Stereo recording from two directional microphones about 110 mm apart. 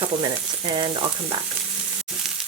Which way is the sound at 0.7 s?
50° right (ahead or behind).